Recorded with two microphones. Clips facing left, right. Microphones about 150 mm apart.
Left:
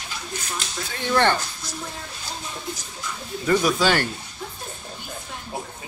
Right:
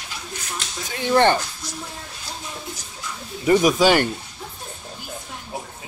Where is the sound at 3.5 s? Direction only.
15° right (ahead or behind).